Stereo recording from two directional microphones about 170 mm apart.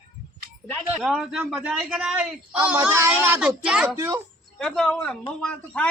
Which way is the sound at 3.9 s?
15° right (ahead or behind).